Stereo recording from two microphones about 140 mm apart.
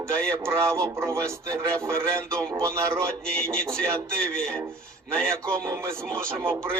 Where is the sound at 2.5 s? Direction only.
20° right (ahead or behind).